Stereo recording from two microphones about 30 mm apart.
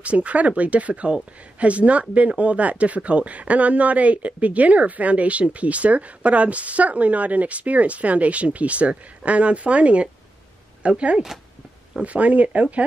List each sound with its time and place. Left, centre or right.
0.0 s speech: right